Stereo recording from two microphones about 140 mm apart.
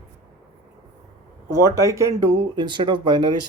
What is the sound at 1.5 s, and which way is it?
Speech, 20° right (ahead or behind).